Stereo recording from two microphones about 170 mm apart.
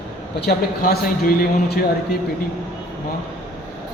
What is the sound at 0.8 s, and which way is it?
A man's voice, 60° left (ahead or behind).